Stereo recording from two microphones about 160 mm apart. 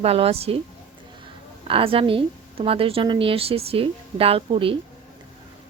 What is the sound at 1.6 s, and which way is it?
A woman's voice, 35° right (ahead or behind).